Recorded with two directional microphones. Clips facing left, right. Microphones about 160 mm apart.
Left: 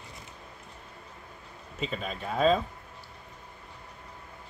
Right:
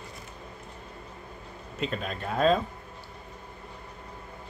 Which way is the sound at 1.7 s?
Centre (ahead or behind).